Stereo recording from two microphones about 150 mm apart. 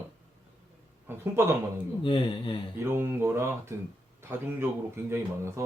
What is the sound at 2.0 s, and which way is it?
Speech, 35° left (ahead or behind).